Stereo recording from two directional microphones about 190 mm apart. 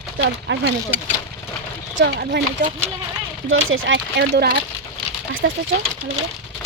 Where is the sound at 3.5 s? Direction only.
90° right; by 4.5 s 60° right (ahead or behind).